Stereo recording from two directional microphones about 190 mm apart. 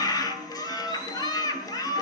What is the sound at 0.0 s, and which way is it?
Music, 20° left (ahead or behind).